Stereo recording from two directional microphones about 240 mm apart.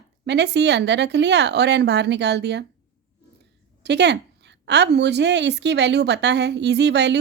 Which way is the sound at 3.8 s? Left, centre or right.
Right.